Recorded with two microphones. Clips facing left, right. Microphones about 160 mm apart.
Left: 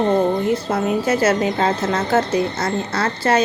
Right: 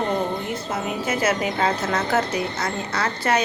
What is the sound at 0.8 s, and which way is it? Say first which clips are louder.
Speech: left 5 dB; 35° left (ahead or behind).